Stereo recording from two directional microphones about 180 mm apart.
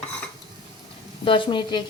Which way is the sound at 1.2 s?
30° left (ahead or behind).